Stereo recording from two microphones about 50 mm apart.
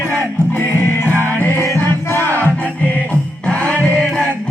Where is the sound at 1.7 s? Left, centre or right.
Left.